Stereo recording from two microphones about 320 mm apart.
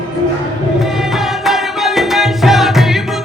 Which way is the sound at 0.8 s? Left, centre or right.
Centre.